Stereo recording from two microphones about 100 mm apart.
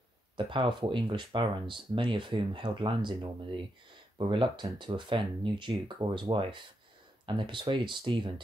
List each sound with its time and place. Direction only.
0.4 s speech: 55° right (ahead or behind)